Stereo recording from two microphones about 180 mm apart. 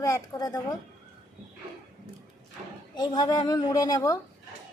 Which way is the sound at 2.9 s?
20° left (ahead or behind).